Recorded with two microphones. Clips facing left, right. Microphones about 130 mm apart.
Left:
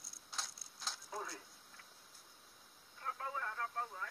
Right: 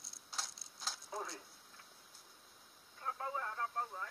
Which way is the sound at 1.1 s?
25° right (ahead or behind).